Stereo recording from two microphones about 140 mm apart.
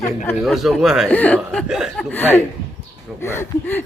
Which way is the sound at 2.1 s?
15° left (ahead or behind).